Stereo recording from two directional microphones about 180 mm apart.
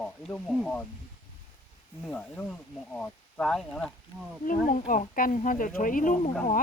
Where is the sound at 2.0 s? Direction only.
5° left (ahead or behind).